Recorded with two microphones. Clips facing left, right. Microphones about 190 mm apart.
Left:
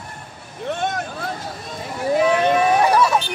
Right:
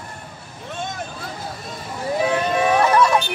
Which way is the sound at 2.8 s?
5° left (ahead or behind).